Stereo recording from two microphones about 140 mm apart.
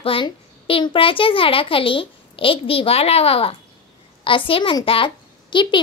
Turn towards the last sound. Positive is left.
turn(degrees=35)  # may be behind; listen again after turning